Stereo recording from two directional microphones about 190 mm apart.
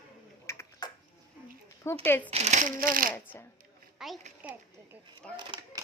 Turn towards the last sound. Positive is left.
turn(degrees=-20)  # may be behind; listen again after turning